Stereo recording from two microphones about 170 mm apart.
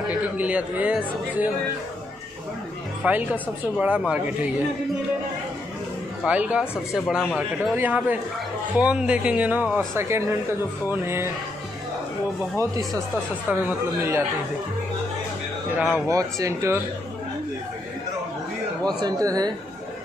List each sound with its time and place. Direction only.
0.1 s a woman's voice: 10° right (ahead or behind)
3.0 s a woman's voice: 10° right (ahead or behind)
6.2 s a woman's voice: 5° right (ahead or behind)
12.5 s a woman's voice: 20° right (ahead or behind)
16.1 s speech: 20° right (ahead or behind)
19.0 s speech: 20° right (ahead or behind)